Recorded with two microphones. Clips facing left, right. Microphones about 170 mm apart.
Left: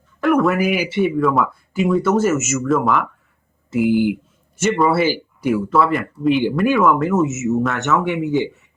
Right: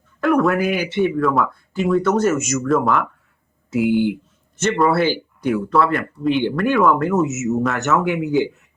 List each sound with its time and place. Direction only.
0.2 s speech: centre (ahead or behind)